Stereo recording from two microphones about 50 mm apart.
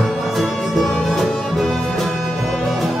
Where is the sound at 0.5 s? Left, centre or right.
Centre.